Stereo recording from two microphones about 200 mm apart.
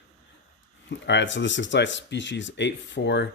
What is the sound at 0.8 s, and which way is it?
Speech, 60° left (ahead or behind).